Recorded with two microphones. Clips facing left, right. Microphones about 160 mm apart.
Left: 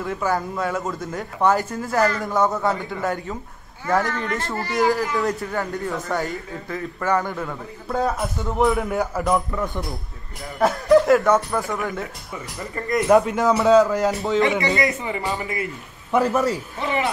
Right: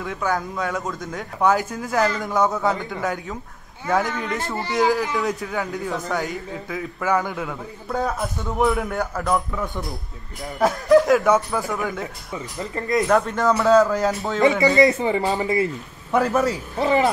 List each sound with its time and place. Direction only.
0.0 s a man's voice: centre (ahead or behind)
12.7 s speech: 25° right (ahead or behind)
13.1 s a man's voice: 5° left (ahead or behind)
14.8 s speech: 30° right (ahead or behind)
16.1 s a man's voice: centre (ahead or behind)
16.7 s speech: 35° right (ahead or behind)